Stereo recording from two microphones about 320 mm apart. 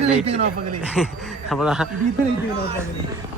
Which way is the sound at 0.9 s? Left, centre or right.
Centre.